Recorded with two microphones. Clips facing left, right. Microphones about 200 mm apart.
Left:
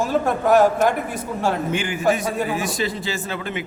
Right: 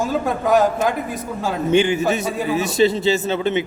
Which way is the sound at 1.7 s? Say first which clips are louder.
Right 4 dB; 25° right (ahead or behind).